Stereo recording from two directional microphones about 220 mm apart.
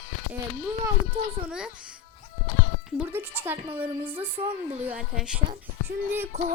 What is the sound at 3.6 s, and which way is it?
Speech, 25° right (ahead or behind).